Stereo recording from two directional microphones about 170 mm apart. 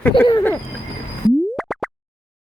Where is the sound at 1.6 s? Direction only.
Centre (ahead or behind).